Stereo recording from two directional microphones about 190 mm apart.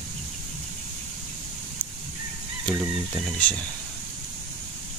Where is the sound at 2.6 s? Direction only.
5° right (ahead or behind).